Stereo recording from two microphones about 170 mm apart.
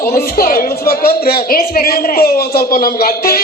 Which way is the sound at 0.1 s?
60° left (ahead or behind).